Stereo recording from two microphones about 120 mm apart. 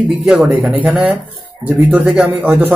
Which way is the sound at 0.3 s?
10° right (ahead or behind).